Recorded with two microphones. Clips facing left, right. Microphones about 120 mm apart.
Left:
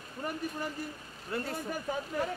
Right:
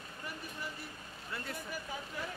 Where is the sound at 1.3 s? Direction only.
45° left (ahead or behind).